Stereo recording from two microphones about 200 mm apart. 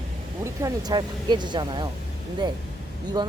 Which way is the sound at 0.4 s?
15° right (ahead or behind).